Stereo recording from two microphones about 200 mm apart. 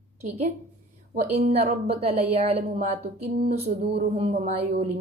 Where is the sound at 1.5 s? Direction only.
30° right (ahead or behind).